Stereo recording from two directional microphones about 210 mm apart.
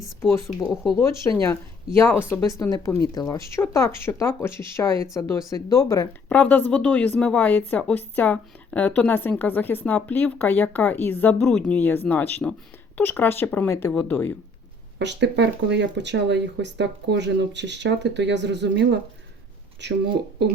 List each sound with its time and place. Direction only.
0.2 s a woman's voice: 10° left (ahead or behind)
14.9 s speech: 55° right (ahead or behind)